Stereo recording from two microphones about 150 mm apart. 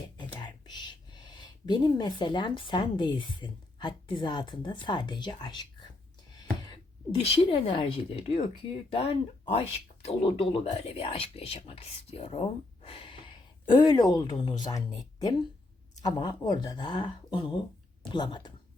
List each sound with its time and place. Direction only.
0.2 s speech: 30° left (ahead or behind)
7.2 s speech: 40° left (ahead or behind)
13.7 s speech: 30° left (ahead or behind)